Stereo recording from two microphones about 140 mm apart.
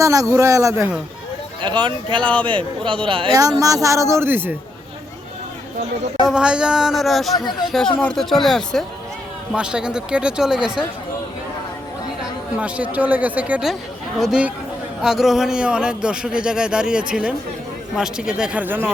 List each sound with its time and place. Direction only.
0.0 s speech: 25° right (ahead or behind)
1.6 s speech: 35° right (ahead or behind)
3.3 s speech: 25° right (ahead or behind)
6.2 s speech: 5° right (ahead or behind)
7.3 s speech: 30° left (ahead or behind)
8.0 s speech: 5° left (ahead or behind)
12.5 s a man's voice: 10° right (ahead or behind)